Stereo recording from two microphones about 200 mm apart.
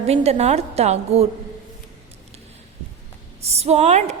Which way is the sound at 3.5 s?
30° right (ahead or behind).